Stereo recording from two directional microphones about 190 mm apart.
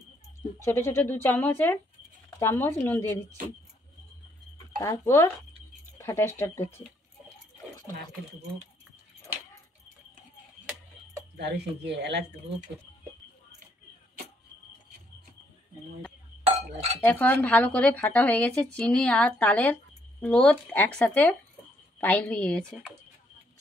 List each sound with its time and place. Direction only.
0.6 s speech: 15° left (ahead or behind)
4.7 s speech: 15° left (ahead or behind)
11.3 s speech: 60° right (ahead or behind)
17.0 s speech: 10° left (ahead or behind)